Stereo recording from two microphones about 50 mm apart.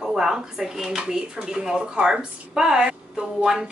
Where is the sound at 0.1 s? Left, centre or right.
Centre.